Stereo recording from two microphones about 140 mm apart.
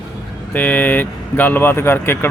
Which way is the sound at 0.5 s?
10° left (ahead or behind).